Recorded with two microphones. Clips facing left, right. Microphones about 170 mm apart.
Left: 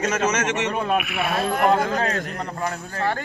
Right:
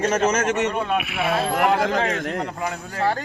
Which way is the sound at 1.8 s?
90° right.